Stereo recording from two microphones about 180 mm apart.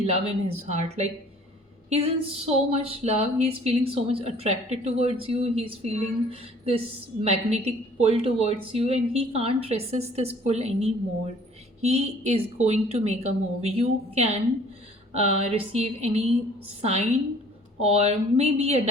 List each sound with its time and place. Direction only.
0.0 s a woman's voice: 35° right (ahead or behind)
17.7 s a woman's voice: 35° right (ahead or behind)